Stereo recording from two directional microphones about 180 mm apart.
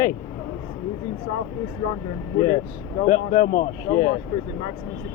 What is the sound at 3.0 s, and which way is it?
Speech, 45° left (ahead or behind).